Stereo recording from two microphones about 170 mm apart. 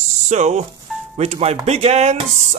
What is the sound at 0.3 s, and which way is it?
Speech, 45° right (ahead or behind).